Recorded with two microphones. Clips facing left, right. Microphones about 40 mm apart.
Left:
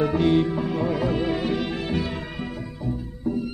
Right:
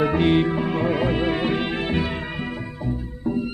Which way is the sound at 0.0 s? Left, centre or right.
Right.